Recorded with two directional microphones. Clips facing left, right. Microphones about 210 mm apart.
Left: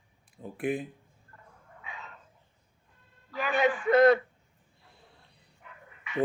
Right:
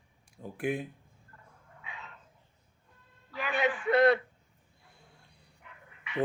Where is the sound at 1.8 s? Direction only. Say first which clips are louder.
Left 2 dB; 40° left (ahead or behind).